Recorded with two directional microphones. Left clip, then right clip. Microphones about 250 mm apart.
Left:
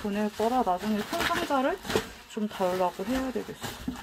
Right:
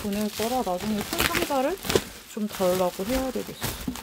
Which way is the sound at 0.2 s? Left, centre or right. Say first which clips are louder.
Left 1 dB; right.